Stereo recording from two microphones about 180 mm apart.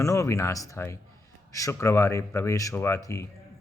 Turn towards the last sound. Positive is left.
turn(degrees=15)  # may be behind; listen again after turning